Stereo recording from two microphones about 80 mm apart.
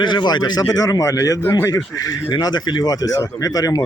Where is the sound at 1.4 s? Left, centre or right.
Left.